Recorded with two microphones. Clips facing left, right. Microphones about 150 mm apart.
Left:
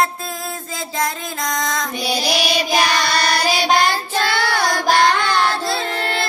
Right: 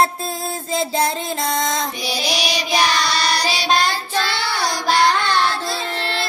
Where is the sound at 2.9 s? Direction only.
55° left (ahead or behind).